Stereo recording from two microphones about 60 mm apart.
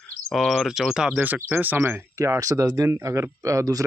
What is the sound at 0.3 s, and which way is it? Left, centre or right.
Speech, centre.